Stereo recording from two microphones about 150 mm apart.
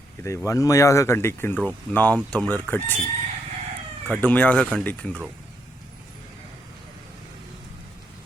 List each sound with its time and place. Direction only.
0.2 s speech: 20° left (ahead or behind)
4.0 s speech: 10° left (ahead or behind)